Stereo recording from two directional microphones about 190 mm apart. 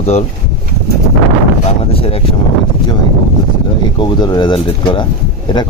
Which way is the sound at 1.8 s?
30° left (ahead or behind).